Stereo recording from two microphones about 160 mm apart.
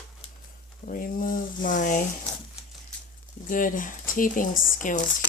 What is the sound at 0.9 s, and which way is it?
Speech, 60° left (ahead or behind).